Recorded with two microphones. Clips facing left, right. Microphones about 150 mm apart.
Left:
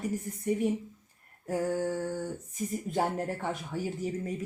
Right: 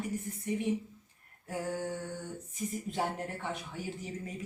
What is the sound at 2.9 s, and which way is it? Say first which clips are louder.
Speech: left 6 dB; 45° left (ahead or behind).